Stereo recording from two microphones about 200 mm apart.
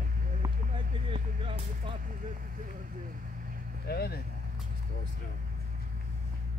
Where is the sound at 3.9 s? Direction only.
50° left (ahead or behind).